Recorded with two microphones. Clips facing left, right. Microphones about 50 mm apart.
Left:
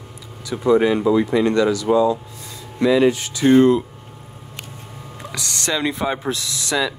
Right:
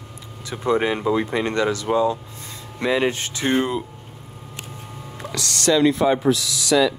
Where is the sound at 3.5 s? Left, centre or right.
Centre.